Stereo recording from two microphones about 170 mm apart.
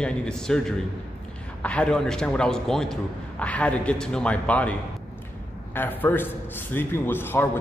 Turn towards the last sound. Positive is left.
turn(degrees=10)  # may be behind; listen again after turning